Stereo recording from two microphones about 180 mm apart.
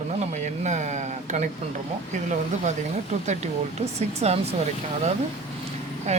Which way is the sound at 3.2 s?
40° right (ahead or behind).